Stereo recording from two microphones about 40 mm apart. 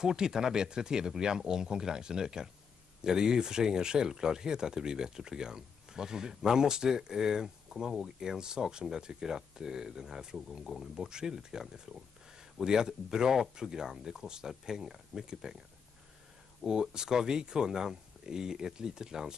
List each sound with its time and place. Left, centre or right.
0.0 s speech: centre
16.6 s speech: centre